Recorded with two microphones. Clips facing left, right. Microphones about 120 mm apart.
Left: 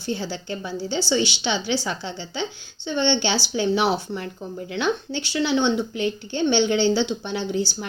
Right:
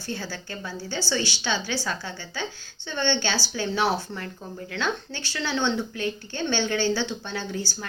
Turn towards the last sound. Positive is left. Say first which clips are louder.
# left 6 dB
turn(degrees=20)  # may be behind; listen again after turning